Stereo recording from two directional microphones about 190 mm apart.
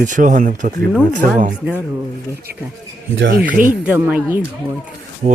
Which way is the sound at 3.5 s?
45° right (ahead or behind).